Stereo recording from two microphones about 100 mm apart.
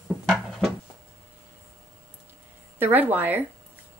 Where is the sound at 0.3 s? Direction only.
Centre (ahead or behind).